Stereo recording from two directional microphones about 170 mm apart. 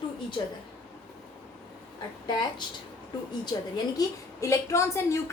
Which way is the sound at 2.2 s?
25° left (ahead or behind).